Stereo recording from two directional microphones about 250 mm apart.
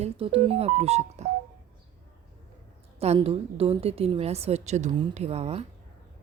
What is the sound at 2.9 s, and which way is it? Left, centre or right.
A woman's voice, right.